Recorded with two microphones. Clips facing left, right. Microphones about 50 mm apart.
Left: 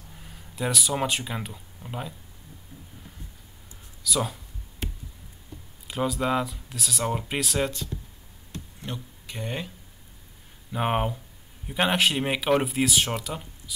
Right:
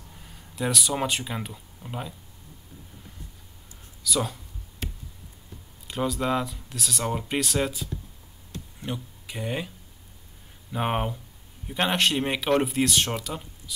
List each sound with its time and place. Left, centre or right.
0.1 s speech: centre
4.0 s speech: centre
5.9 s speech: centre
10.7 s speech: centre